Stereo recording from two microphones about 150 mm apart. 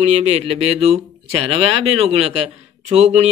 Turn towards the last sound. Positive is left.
turn(degrees=-45)  # may be behind; listen again after turning